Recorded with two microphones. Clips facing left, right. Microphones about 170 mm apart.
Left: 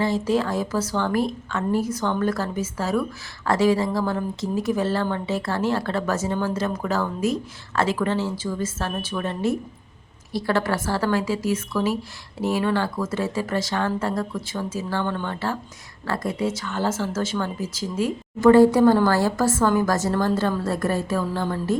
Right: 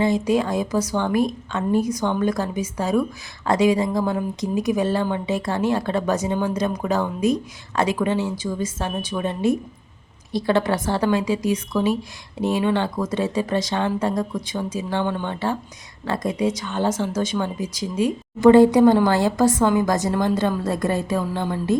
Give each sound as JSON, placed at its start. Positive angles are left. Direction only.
{"t": 0.0, "sound": "speech", "side_deg": -15}